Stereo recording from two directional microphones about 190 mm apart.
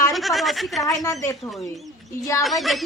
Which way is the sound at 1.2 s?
15° left (ahead or behind).